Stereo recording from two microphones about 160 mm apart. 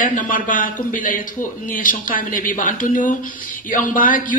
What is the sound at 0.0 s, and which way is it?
Speech, 55° left (ahead or behind).